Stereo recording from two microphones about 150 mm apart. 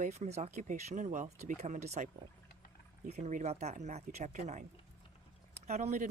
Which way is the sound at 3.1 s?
55° right (ahead or behind).